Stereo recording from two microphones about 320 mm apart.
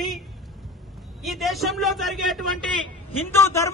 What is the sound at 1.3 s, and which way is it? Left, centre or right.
A man's voice, centre.